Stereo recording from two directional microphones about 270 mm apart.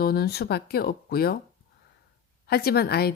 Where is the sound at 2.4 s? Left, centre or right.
Left.